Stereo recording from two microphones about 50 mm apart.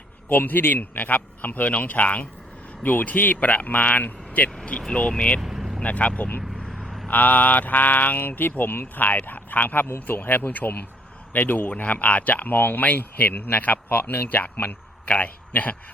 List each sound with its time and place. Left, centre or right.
0.3 s speech: left
5.4 s vehicle: centre
5.8 s speech: left
6.6 s vehicle: centre
7.1 s speech: left